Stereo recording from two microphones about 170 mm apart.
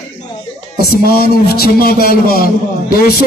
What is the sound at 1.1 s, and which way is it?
A man's voice, 65° left (ahead or behind).